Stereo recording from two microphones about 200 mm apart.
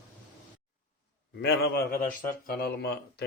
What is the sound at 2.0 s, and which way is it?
A man's voice, 45° left (ahead or behind).